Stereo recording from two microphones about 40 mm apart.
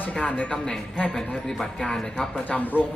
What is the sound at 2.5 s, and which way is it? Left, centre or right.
Speech, left.